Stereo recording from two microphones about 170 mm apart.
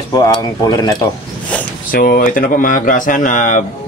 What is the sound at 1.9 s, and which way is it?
Speech, 60° left (ahead or behind).